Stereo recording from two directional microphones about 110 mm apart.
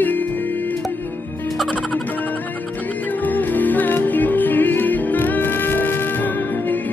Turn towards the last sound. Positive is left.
turn(degrees=15)  # may be behind; listen again after turning